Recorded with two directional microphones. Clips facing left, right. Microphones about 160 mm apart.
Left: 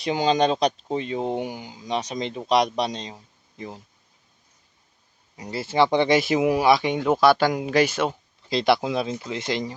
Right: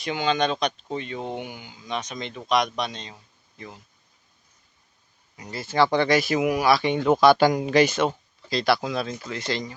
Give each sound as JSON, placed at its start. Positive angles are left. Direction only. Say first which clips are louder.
{"t": 0.0, "sound": "speech", "louder": "left 3 dB", "side_deg": 35}
{"t": 5.4, "sound": "speech", "louder": "left 1 dB", "side_deg": 30}
{"t": 8.4, "sound": "speech", "louder": "left 2 dB", "side_deg": 20}